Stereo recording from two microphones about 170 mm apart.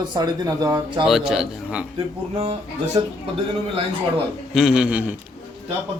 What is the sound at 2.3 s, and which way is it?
Speech, 40° right (ahead or behind).